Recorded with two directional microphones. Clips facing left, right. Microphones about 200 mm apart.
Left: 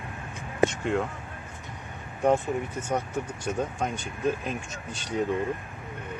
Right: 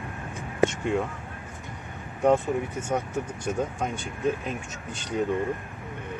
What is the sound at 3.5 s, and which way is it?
Speech, 5° right (ahead or behind).